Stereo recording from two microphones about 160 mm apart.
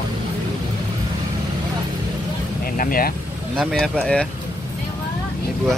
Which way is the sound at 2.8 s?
65° left (ahead or behind).